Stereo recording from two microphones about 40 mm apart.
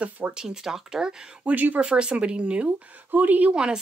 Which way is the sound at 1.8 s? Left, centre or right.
Right.